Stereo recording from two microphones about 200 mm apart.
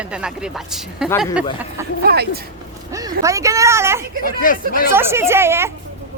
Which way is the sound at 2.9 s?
15° right (ahead or behind).